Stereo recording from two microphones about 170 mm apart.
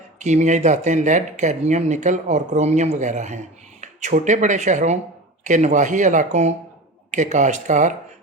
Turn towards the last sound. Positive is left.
turn(degrees=-45)  # may be behind; listen again after turning